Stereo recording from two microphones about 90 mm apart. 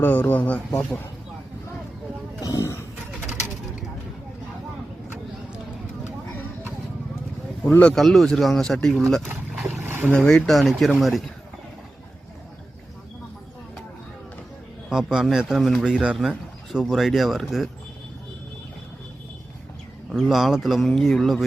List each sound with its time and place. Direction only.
0.0 s speech: 20° left (ahead or behind)
0.7 s speech: 5° left (ahead or behind)
2.4 s a sound: 35° left (ahead or behind)
7.7 s speech: 15° left (ahead or behind)
7.9 s speech: centre (ahead or behind)
9.6 s boat: 25° right (ahead or behind)
10.1 s speech: 10° left (ahead or behind)
14.8 s speech: 5° right (ahead or behind)
20.1 s speech: centre (ahead or behind)